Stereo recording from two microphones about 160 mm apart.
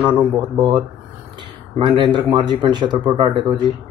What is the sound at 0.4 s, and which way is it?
Speech, 30° right (ahead or behind).